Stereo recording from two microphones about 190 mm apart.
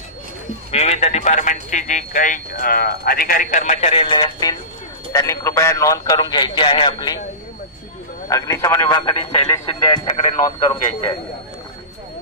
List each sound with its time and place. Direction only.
0.7 s a man's voice: 35° left (ahead or behind)
8.3 s a man's voice: 15° left (ahead or behind)